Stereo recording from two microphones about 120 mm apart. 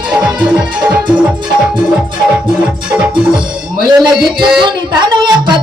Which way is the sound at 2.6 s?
10° right (ahead or behind).